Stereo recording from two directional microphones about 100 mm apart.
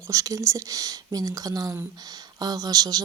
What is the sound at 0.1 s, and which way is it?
Speech, 35° right (ahead or behind).